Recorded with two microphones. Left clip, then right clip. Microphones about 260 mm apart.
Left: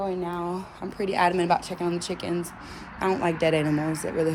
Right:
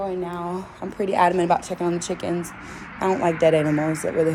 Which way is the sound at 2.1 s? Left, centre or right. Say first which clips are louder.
Right 3 dB; left.